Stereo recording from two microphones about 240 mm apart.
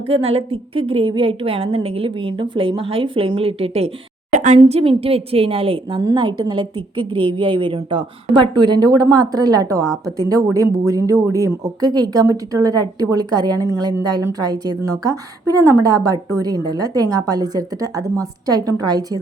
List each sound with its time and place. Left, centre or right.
0.1 s a woman's voice: right